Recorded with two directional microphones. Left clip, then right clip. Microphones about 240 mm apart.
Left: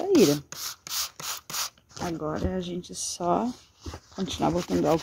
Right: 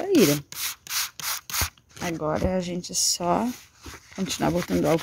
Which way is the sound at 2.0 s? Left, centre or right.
Right.